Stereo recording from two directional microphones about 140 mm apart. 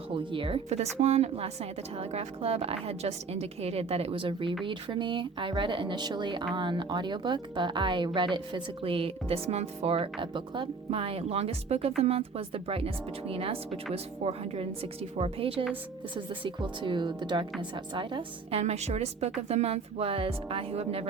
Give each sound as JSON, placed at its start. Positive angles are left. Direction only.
{"t": 0.1, "sound": "a woman's voice", "side_deg": -40}
{"t": 18.6, "sound": "a woman's voice", "side_deg": -50}